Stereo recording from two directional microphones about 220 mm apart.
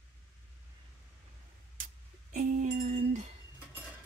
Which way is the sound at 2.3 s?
35° right (ahead or behind).